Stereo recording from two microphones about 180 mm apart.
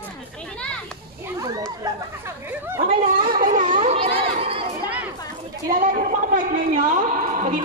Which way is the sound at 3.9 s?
30° right (ahead or behind).